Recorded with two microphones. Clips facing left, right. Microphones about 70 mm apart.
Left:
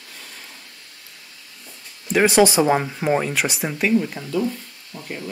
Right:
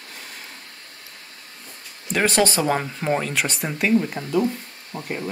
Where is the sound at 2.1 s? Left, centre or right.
Centre.